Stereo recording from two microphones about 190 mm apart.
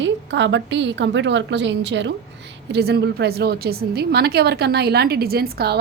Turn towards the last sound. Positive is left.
turn(degrees=-55)  # may be behind; listen again after turning